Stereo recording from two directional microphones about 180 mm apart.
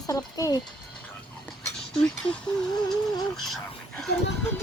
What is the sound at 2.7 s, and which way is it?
Speech, 20° left (ahead or behind).